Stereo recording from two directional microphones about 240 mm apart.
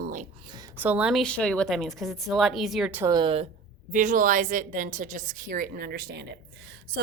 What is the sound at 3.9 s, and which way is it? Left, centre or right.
A woman's voice, right.